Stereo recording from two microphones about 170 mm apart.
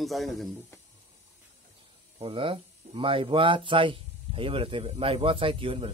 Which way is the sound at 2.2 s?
30° right (ahead or behind).